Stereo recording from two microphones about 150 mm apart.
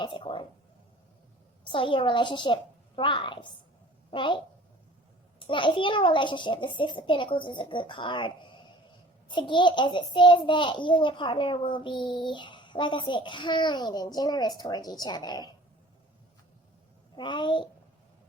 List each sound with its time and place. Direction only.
0.0 s a child's voice: 30° left (ahead or behind)
1.6 s a child's voice: 35° left (ahead or behind)
5.5 s a child's voice: 35° left (ahead or behind)
17.2 s a child's voice: 30° left (ahead or behind)